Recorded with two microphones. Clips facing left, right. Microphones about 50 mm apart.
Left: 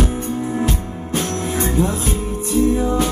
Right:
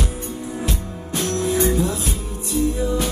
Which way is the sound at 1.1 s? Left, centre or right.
Left.